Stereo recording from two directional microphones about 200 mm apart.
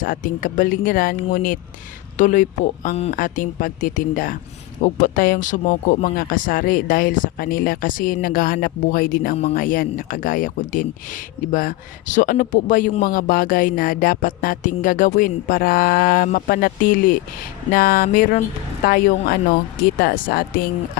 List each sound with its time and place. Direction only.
0.0 s a man's voice: 40° left (ahead or behind)